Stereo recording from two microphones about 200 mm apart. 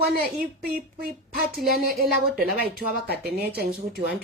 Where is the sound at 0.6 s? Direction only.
50° right (ahead or behind).